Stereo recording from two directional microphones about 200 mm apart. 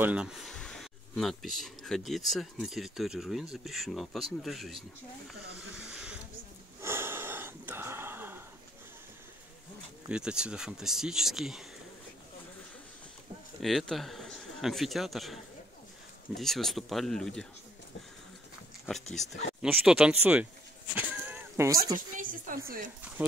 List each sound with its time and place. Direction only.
0.0 s speech: 5° right (ahead or behind)
5.8 s a sound: 5° right (ahead or behind)
10.0 s speech: 5° right (ahead or behind)
13.6 s speech: centre (ahead or behind)
16.3 s speech: centre (ahead or behind)
19.6 s speech: 5° right (ahead or behind)
20.9 s a sound: 10° right (ahead or behind)
21.9 s speech: 45° right (ahead or behind)